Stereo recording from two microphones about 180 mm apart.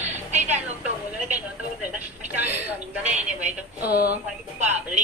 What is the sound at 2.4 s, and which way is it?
A woman's voice, 10° right (ahead or behind).